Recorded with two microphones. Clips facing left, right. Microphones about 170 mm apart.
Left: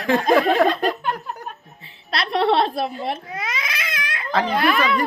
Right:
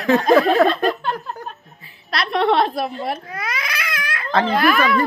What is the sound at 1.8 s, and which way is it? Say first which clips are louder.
A woman's voice: right 1 dB; 30° left (ahead or behind).